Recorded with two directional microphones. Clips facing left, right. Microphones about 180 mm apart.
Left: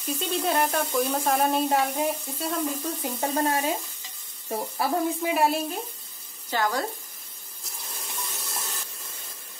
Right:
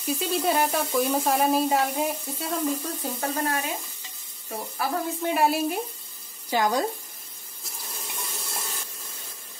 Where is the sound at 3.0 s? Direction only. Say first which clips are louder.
Left 2 dB; 25° left (ahead or behind).